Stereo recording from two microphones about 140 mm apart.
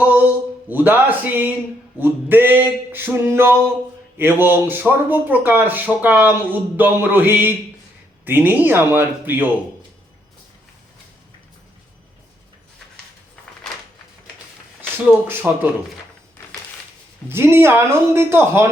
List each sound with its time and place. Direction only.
0.0 s a sound: 10° right (ahead or behind)
0.7 s speech: 10° right (ahead or behind)
15.3 s speech: 15° right (ahead or behind)
17.2 s speech: 15° right (ahead or behind)